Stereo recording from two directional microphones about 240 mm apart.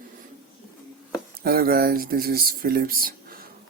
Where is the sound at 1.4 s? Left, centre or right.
Right.